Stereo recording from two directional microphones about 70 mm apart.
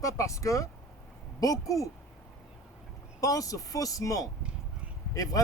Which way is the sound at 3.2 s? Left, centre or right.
Left.